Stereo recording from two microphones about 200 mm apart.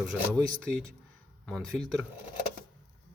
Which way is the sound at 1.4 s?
5° left (ahead or behind).